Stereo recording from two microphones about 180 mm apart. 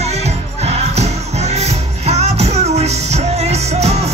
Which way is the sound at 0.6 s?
35° right (ahead or behind).